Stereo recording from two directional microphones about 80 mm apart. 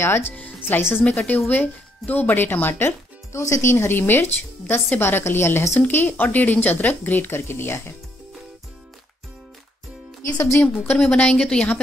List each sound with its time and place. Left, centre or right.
1.0 s speech: centre
5.8 s speech: left
10.2 s a woman's voice: left
10.6 s a woman's voice: centre